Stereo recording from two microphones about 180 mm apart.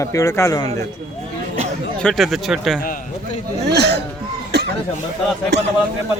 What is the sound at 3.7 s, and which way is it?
Speech, 65° right (ahead or behind).